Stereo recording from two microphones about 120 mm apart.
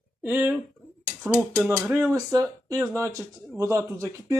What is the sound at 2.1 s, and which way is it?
Speech, 30° right (ahead or behind).